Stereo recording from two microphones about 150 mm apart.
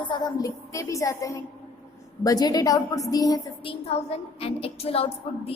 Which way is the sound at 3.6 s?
40° left (ahead or behind).